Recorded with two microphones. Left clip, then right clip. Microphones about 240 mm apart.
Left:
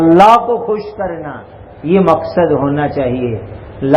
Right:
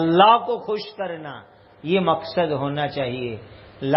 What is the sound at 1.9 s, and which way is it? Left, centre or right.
A man's voice, right.